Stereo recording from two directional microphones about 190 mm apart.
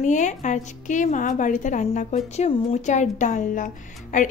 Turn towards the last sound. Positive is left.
turn(degrees=40)  # may be behind; listen again after turning